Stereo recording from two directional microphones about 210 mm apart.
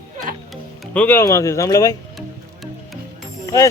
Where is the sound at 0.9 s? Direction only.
10° left (ahead or behind).